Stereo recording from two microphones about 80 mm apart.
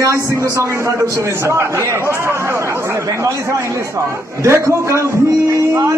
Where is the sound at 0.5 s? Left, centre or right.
Right.